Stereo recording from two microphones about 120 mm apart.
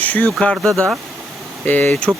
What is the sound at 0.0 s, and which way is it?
Speech, 15° left (ahead or behind).